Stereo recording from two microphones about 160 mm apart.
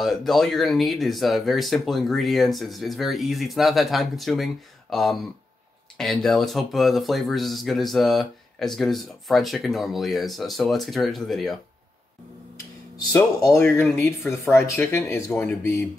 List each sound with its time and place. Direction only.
0.0 s speech: centre (ahead or behind)
13.1 s speech: 20° left (ahead or behind)